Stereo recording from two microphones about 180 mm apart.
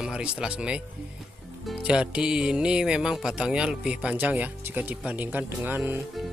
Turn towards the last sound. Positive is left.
turn(degrees=-10)  # may be behind; listen again after turning